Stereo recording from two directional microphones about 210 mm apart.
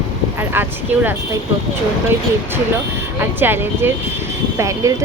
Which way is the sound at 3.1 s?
10° right (ahead or behind).